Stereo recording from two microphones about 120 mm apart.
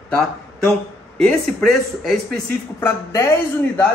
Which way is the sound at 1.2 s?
5° left (ahead or behind).